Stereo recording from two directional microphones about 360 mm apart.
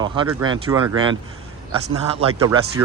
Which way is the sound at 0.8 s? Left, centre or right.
Right.